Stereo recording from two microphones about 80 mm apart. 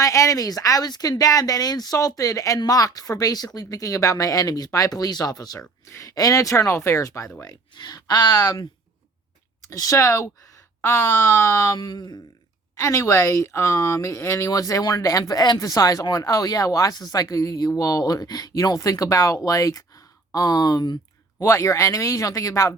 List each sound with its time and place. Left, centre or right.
0.0 s speech: left
7.4 s speech: left
9.6 s speech: left
11.8 s speech: left
12.8 s speech: left
20.3 s speech: left
21.4 s speech: left